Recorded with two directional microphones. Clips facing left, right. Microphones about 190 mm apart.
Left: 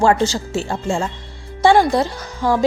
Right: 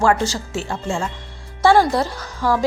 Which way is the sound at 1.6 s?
20° left (ahead or behind).